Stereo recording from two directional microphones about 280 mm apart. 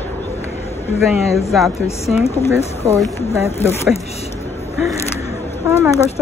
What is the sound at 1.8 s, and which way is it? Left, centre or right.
Speech, left.